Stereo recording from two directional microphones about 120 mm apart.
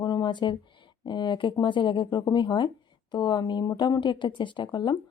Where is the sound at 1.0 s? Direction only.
40° left (ahead or behind).